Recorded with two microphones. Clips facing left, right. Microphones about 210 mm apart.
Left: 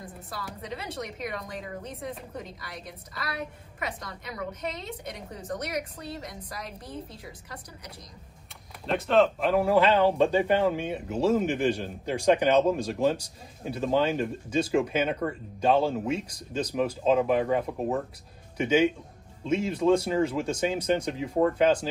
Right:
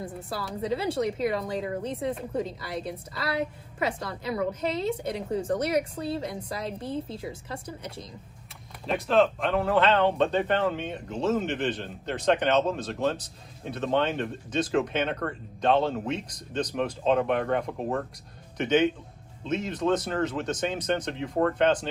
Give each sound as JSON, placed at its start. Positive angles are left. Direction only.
{"t": 0.0, "sound": "speech", "side_deg": -30}
{"t": 8.8, "sound": "speech", "side_deg": 0}